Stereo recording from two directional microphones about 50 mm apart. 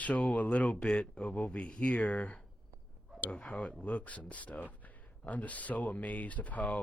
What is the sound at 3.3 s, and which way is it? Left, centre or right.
Speech, left.